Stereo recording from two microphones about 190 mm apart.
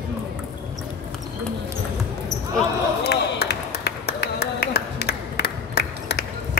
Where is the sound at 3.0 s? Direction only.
60° left (ahead or behind).